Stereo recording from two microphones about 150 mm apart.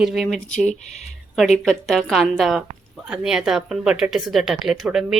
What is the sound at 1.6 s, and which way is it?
Speech, centre (ahead or behind).